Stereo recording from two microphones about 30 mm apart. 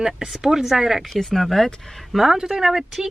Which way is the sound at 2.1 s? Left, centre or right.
Centre.